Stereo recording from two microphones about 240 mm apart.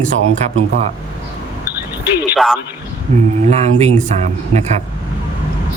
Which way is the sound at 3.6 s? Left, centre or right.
Right.